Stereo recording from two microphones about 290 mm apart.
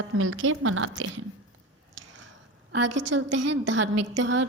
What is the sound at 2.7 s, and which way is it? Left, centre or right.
Speech, right.